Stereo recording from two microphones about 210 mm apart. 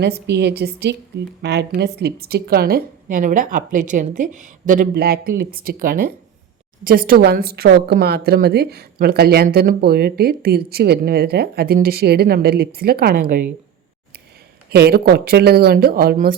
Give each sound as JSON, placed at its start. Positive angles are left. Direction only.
{"t": 0.0, "sound": "a woman's voice", "side_deg": -55}
{"t": 14.7, "sound": "a woman's voice", "side_deg": -50}